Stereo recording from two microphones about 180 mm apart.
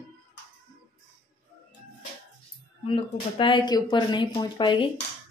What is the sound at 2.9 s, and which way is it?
Speech, 30° left (ahead or behind).